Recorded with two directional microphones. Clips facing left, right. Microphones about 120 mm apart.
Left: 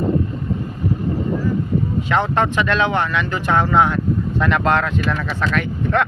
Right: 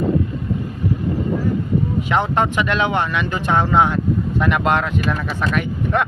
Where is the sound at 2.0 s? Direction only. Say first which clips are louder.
Left 1 dB; 15° right (ahead or behind).